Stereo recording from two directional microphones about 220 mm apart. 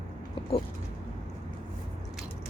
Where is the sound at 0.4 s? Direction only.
25° left (ahead or behind).